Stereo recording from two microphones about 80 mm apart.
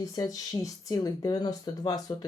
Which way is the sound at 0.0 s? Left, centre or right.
Left.